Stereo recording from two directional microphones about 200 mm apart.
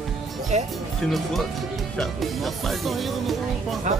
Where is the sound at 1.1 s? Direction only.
Centre (ahead or behind).